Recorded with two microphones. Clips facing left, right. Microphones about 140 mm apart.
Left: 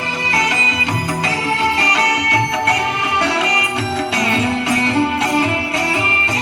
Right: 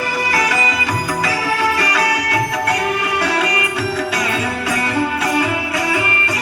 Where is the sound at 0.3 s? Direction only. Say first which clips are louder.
Even; 25° left (ahead or behind).